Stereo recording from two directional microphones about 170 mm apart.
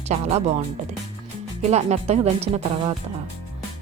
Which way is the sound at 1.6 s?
40° right (ahead or behind).